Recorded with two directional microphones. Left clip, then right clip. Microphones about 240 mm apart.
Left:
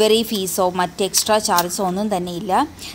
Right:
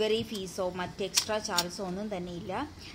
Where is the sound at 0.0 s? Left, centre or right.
Left.